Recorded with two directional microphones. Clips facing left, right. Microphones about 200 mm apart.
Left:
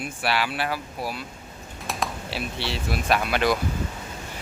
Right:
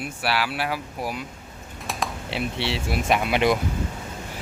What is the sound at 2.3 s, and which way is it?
Speech, 25° right (ahead or behind).